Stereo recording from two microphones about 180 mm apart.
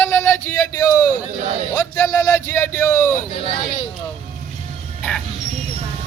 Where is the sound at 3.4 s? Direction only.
25° left (ahead or behind).